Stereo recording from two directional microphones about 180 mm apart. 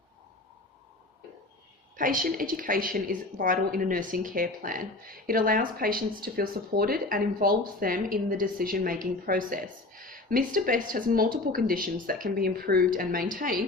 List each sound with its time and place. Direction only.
2.0 s a woman's voice: 50° right (ahead or behind)